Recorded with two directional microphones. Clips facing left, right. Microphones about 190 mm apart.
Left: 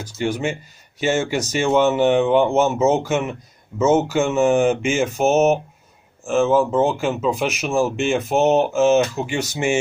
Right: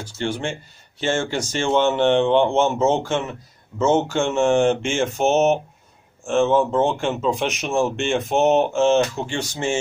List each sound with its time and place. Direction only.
0.2 s speech: 10° left (ahead or behind)